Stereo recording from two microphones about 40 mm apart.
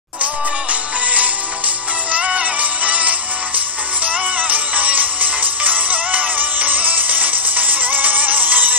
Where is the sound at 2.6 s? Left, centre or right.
Right.